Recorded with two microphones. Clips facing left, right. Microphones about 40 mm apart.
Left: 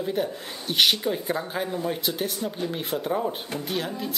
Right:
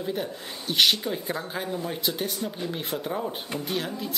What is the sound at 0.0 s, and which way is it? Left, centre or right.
Speech, centre.